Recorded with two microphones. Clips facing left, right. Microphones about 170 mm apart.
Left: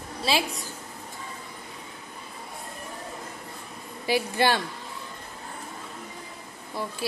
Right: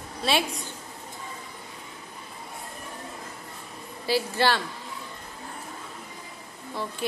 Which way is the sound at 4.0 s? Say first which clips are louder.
Even; 15° left (ahead or behind).